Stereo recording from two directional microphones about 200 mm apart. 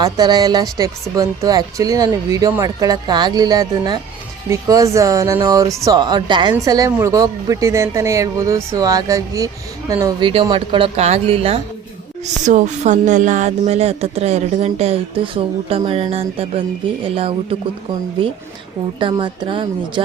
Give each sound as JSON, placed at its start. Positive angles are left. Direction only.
{"t": 0.0, "sound": "speech", "side_deg": -20}
{"t": 18.9, "sound": "speech", "side_deg": -25}